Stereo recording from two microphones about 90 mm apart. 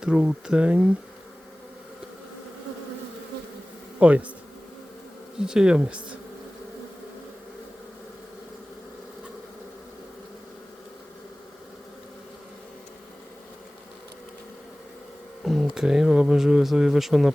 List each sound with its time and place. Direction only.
0.0 s speech: 10° right (ahead or behind)
4.0 s speech: 15° right (ahead or behind)
5.4 s speech: 10° right (ahead or behind)
15.4 s speech: 5° right (ahead or behind)